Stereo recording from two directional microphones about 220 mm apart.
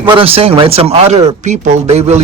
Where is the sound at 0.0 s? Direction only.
25° right (ahead or behind).